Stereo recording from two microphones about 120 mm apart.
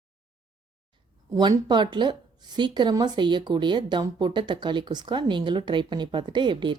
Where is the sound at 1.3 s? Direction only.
35° right (ahead or behind).